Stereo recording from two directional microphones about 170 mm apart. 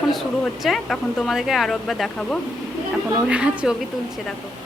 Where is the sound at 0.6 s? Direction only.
Centre (ahead or behind).